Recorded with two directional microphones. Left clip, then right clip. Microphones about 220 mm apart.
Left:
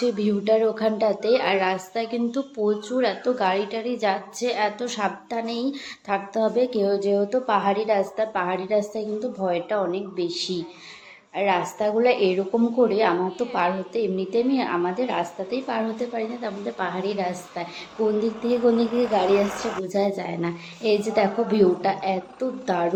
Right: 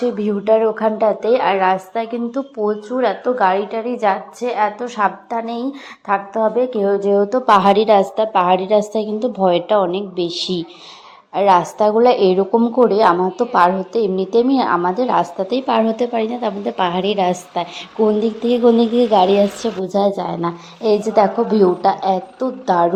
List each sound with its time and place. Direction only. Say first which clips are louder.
0.0 s a woman's voice: right 5 dB; 5° right (ahead or behind)
7.3 s a woman's voice: right 10 dB; 35° right (ahead or behind)
19.9 s a woman's voice: right 8 dB; 15° right (ahead or behind)